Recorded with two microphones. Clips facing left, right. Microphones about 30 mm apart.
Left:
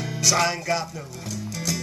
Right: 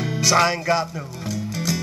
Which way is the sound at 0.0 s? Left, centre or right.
Centre.